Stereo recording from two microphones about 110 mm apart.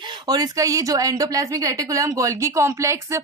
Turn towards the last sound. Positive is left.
turn(degrees=-25)  # may be behind; listen again after turning